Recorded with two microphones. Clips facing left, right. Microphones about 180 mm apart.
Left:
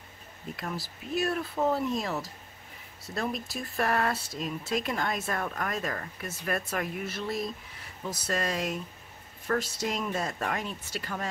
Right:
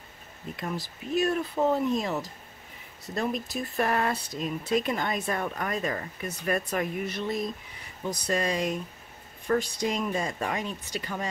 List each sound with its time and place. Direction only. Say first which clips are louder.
0.6 s speech: right 4 dB; centre (ahead or behind)